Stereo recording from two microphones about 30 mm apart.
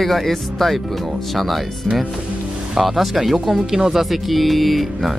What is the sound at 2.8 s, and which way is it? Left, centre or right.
Speech, centre.